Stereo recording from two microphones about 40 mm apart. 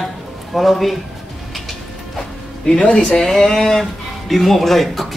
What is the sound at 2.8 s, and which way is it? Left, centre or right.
Speech, left.